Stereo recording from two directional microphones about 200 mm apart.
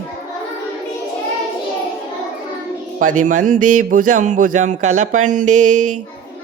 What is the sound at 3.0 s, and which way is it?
Speech, 40° right (ahead or behind).